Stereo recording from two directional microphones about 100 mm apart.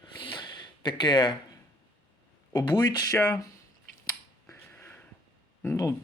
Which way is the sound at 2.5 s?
45° left (ahead or behind).